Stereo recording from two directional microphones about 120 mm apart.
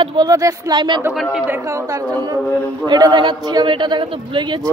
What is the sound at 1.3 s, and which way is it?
Speech, 15° right (ahead or behind).